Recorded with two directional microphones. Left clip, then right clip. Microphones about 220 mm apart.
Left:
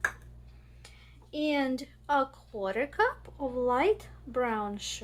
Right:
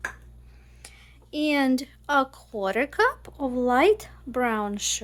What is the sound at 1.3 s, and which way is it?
Speech, 55° right (ahead or behind).